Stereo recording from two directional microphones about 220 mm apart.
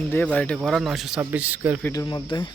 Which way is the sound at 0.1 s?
5° left (ahead or behind).